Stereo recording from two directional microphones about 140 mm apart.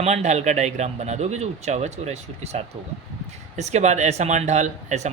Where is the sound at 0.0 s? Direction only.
55° right (ahead or behind).